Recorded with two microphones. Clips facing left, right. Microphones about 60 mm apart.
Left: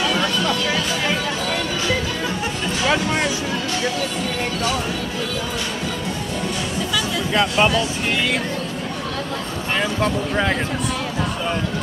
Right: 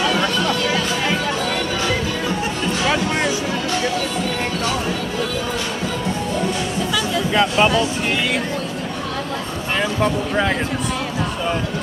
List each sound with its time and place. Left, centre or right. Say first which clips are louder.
0.1 s music: right 1 dB; right
7.3 s speech: right 1 dB; centre
9.8 s speech: right 2 dB; centre